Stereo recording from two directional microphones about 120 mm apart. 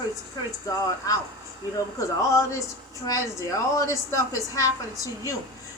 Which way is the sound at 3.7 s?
25° left (ahead or behind).